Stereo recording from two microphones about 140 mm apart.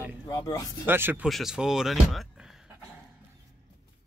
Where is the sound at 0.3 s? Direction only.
25° left (ahead or behind).